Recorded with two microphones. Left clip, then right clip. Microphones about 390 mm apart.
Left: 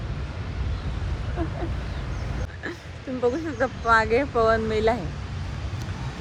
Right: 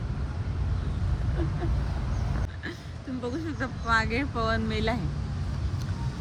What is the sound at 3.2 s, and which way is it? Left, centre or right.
Speech, left.